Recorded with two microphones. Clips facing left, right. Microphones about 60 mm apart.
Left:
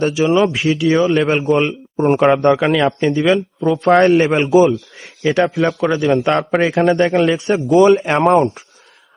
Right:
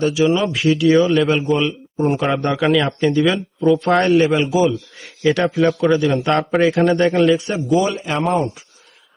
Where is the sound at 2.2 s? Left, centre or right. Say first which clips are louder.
Left 8 dB; left.